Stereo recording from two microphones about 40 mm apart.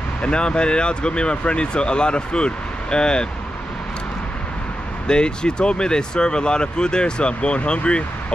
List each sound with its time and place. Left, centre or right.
0.2 s speech: left
5.0 s speech: left